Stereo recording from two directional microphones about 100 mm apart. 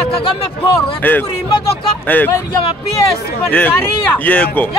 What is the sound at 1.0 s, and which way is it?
Speech, 20° left (ahead or behind).